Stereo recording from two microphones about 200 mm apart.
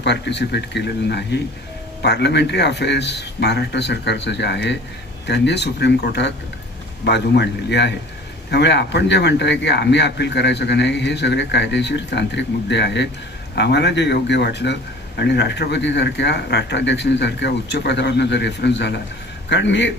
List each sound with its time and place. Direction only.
0.0 s a man's voice: 60° left (ahead or behind)